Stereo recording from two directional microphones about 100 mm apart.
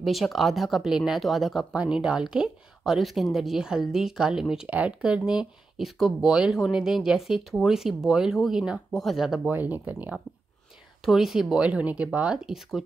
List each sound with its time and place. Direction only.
0.0 s speech: centre (ahead or behind)
9.5 s speech: 15° right (ahead or behind)
11.0 s speech: centre (ahead or behind)